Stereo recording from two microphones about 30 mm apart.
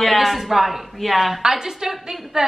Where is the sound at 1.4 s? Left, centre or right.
Centre.